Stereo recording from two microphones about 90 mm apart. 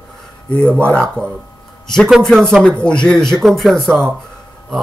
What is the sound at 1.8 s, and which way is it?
Speech, 5° left (ahead or behind).